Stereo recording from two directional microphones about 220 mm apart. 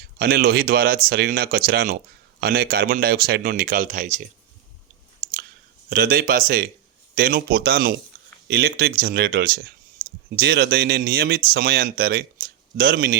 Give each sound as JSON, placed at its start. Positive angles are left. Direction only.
{"t": 0.2, "sound": "speech", "side_deg": -45}
{"t": 5.9, "sound": "speech", "side_deg": -40}
{"t": 10.0, "sound": "a sound", "side_deg": -25}
{"t": 10.3, "sound": "speech", "side_deg": -45}